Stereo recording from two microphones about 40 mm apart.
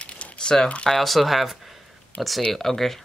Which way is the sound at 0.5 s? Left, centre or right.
Centre.